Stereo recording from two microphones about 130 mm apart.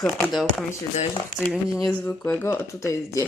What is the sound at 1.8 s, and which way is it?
Speech, 10° left (ahead or behind).